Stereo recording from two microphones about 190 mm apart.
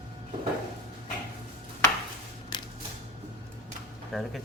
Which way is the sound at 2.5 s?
20° left (ahead or behind).